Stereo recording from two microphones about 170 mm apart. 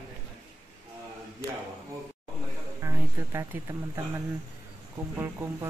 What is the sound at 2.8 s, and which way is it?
Speech, 15° right (ahead or behind).